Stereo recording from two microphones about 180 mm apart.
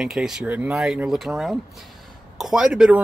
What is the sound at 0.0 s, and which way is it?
Speech, 5° right (ahead or behind).